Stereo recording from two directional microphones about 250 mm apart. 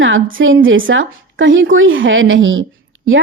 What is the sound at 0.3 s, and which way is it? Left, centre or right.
Speech, right.